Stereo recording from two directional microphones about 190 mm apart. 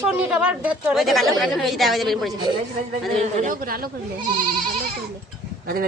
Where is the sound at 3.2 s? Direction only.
40° right (ahead or behind).